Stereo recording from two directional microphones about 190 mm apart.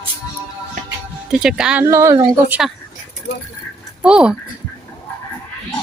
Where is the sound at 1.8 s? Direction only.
15° right (ahead or behind).